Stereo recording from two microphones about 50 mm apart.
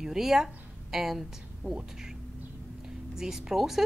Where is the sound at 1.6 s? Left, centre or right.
Right.